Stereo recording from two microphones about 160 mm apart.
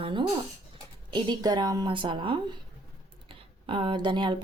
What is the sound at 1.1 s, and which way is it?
A woman's voice, 25° right (ahead or behind).